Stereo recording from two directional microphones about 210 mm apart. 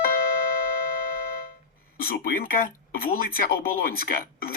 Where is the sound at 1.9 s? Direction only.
45° left (ahead or behind).